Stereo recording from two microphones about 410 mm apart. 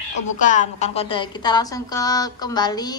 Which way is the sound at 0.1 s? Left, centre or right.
Centre.